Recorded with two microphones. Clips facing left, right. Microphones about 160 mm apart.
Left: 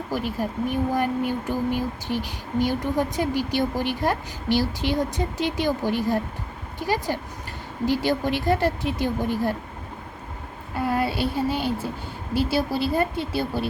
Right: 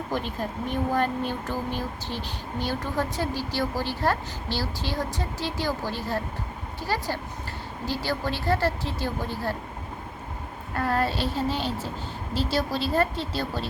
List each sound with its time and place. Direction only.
0.1 s speech: 10° left (ahead or behind)
10.8 s speech: 10° left (ahead or behind)